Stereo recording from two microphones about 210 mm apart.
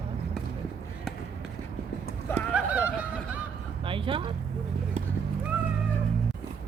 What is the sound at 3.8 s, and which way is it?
Vehicle, 25° right (ahead or behind).